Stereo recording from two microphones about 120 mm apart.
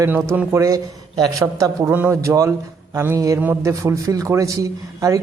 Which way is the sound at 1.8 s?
15° right (ahead or behind).